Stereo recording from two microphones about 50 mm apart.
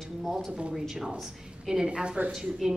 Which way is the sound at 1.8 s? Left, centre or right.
Right.